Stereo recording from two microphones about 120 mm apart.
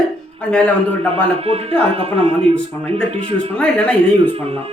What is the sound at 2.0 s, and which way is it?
Speech, 55° right (ahead or behind).